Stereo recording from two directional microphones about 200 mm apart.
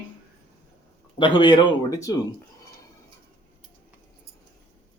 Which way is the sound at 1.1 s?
25° left (ahead or behind).